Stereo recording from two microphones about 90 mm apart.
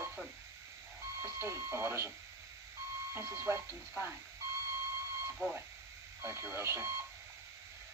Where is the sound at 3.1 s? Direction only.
30° right (ahead or behind).